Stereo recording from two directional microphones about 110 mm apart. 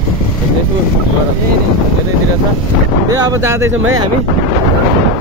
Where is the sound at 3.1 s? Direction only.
30° right (ahead or behind).